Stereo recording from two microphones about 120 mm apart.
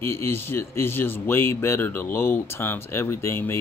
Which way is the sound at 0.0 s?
20° left (ahead or behind).